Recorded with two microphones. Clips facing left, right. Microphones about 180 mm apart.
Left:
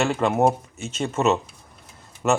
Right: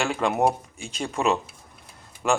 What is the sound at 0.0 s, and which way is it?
Speech, centre (ahead or behind).